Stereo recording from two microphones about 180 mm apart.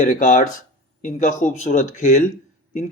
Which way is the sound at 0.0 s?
45° left (ahead or behind).